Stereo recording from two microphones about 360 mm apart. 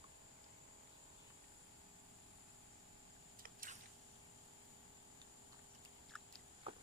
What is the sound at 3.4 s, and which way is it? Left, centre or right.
Squish, right.